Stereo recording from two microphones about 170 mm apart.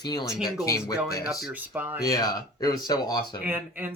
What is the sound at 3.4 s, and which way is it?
Speech, 10° right (ahead or behind).